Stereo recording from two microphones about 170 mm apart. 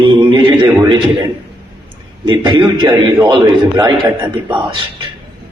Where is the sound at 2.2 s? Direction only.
30° right (ahead or behind).